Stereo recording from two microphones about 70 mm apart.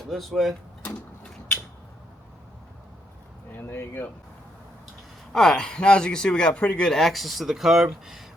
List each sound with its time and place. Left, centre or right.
0.1 s speech: centre
3.5 s speech: left
5.3 s speech: centre
6.8 s speech: centre